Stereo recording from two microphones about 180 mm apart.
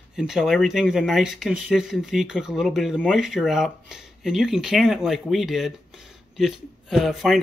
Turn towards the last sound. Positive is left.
turn(degrees=0)  # may be behind; listen again after turning